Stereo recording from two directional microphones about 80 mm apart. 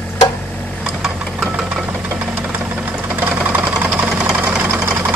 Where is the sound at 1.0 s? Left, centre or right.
Centre.